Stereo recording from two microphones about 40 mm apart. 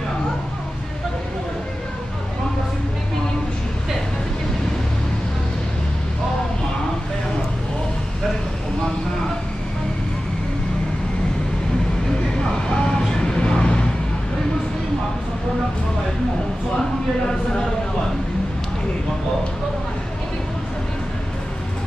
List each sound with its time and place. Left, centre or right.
12.4 s vehicle: left